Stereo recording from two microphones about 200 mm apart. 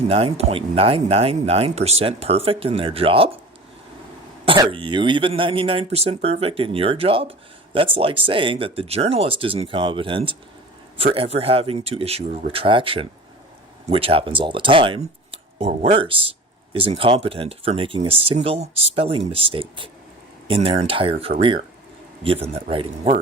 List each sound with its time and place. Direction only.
0.1 s speech: 30° right (ahead or behind)
4.4 s speech: 25° right (ahead or behind)